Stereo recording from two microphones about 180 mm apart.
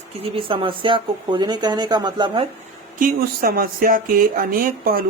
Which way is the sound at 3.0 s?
55° right (ahead or behind).